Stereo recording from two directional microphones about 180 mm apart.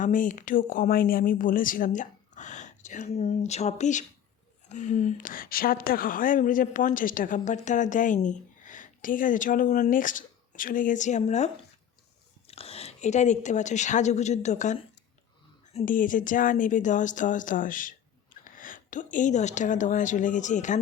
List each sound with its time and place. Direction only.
0.0 s a woman's voice: 45° left (ahead or behind)
18.4 s a sound: 50° left (ahead or behind)
19.1 s a woman's voice: 40° left (ahead or behind)